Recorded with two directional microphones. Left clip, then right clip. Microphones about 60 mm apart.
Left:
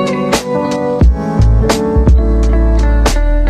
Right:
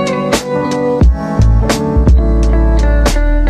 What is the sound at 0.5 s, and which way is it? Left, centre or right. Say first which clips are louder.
Music: right 1 dB; centre.